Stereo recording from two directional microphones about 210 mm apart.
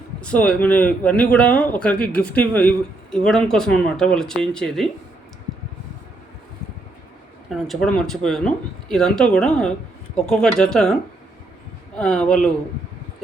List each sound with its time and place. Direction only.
0.2 s speech: 5° left (ahead or behind)
7.5 s speech: centre (ahead or behind)
11.9 s speech: 5° left (ahead or behind)